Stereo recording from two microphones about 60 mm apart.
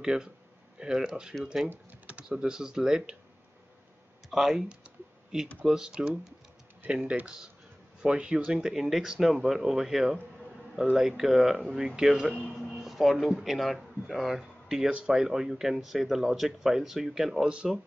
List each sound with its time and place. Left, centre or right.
0.0 s speech: centre
2.0 s typing: centre
2.3 s speech: centre
4.3 s speech: centre
12.7 s a sound: centre
13.4 s speech: centre
14.9 s speech: centre
15.1 s speech: centre